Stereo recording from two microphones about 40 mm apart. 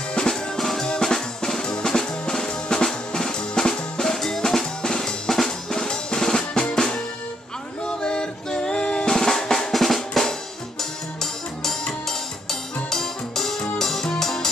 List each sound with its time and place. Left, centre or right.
0.3 s drum: centre
7.8 s drum: left
10.8 s music: centre